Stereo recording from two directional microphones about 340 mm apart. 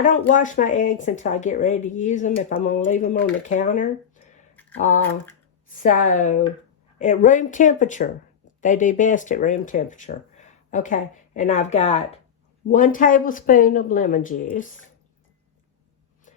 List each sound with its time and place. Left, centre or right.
0.0 s speech: left
5.7 s speech: left